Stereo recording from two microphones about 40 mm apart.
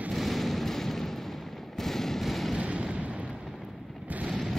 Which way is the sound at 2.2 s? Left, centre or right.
Centre.